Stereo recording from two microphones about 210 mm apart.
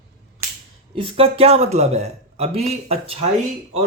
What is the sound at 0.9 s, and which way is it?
Speech, 25° right (ahead or behind).